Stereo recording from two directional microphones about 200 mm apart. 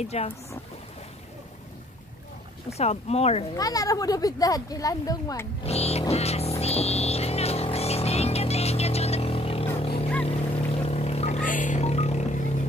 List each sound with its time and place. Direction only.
0.0 s speech: 30° left (ahead or behind)
2.8 s speech: 30° left (ahead or behind)
3.5 s speech: 20° left (ahead or behind)
5.7 s a sound: 30° left (ahead or behind)
9.8 s vehicle: 30° left (ahead or behind)
10.2 s music: 30° left (ahead or behind)